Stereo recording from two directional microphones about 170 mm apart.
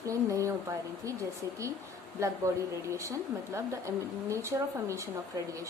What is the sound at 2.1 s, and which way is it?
Speech, 15° right (ahead or behind).